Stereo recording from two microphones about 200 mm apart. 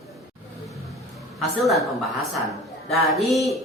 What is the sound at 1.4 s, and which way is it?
Speech, centre (ahead or behind).